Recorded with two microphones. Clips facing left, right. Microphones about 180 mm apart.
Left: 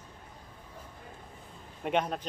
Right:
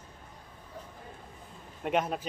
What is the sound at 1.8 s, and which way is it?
Speech, centre (ahead or behind).